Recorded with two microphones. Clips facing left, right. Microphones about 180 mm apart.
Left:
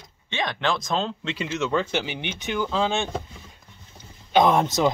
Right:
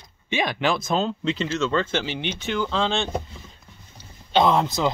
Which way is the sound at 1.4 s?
15° left (ahead or behind).